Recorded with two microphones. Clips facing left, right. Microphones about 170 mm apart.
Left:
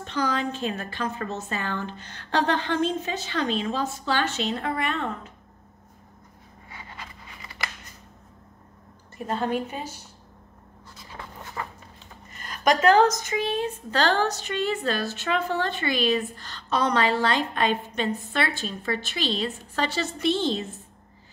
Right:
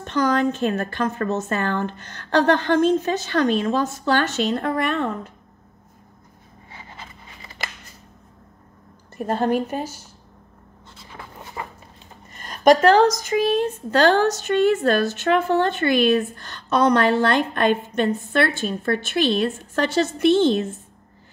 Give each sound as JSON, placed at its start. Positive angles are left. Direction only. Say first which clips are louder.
{"t": 0.0, "sound": "a woman's voice", "louder": "right 7 dB", "side_deg": -50}
{"t": 6.7, "sound": "a sound", "louder": "right 1 dB", "side_deg": -25}
{"t": 9.2, "sound": "a woman's voice", "louder": "right 6 dB", "side_deg": -50}
{"t": 11.6, "sound": "dog", "louder": "right 1 dB", "side_deg": -15}
{"t": 12.4, "sound": "a sound", "louder": "right 8 dB", "side_deg": -35}
{"t": 13.6, "sound": "a woman's voice", "louder": "right 7 dB", "side_deg": -45}